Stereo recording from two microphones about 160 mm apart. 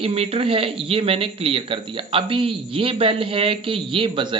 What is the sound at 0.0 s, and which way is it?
Speech, 40° right (ahead or behind).